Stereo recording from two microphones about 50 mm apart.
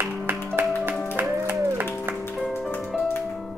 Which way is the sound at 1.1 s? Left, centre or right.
Right.